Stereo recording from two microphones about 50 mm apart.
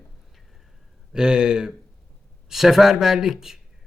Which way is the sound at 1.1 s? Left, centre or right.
Centre.